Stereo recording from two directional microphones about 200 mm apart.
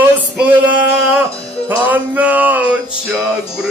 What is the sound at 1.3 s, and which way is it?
Music, 30° left (ahead or behind).